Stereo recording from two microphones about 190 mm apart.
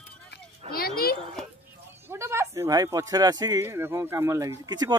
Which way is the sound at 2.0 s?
15° right (ahead or behind).